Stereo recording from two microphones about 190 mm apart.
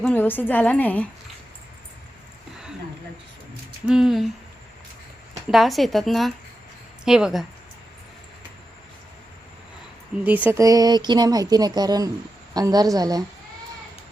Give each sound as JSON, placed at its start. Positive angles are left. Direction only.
{"t": 0.0, "sound": "a woman's voice", "side_deg": 10}
{"t": 3.8, "sound": "speech", "side_deg": -5}
{"t": 5.5, "sound": "speech", "side_deg": 0}
{"t": 10.2, "sound": "speech", "side_deg": -10}